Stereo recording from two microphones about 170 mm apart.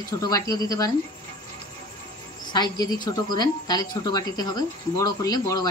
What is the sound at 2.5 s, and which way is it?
A woman's voice, 25° left (ahead or behind).